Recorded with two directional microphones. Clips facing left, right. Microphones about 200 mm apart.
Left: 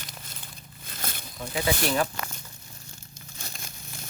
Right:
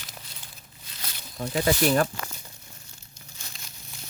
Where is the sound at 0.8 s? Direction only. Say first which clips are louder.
Left 6 dB; 50° left (ahead or behind).